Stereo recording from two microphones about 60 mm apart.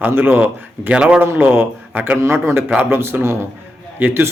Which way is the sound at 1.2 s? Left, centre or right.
Right.